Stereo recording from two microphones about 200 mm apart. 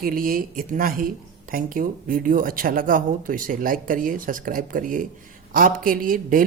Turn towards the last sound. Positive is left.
turn(degrees=-45)  # may be behind; listen again after turning